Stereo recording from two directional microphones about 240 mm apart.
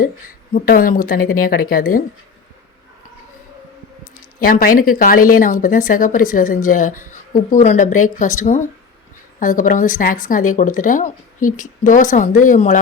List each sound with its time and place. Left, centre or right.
0.0 s speech: left
4.1 s speech: left